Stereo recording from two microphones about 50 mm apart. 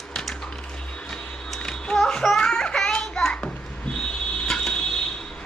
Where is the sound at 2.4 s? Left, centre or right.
Centre.